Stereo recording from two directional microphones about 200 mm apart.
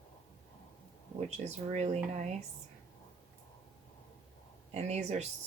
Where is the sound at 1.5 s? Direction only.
35° right (ahead or behind).